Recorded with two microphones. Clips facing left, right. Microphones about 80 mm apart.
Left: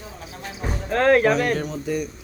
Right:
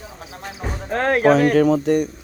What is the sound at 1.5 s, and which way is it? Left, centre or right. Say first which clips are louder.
Speech: right 10 dB; right.